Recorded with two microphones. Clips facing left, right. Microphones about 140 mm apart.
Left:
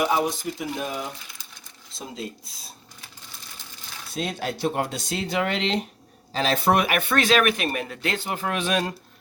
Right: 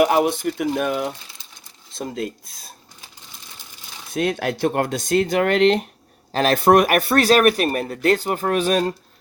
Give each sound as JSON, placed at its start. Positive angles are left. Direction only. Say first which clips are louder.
{"t": 0.0, "sound": "speech", "louder": "right 6 dB", "side_deg": -60}
{"t": 4.1, "sound": "speech", "louder": "right 7 dB", "side_deg": -60}